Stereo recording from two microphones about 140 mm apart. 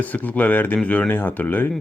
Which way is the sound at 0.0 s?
10° left (ahead or behind).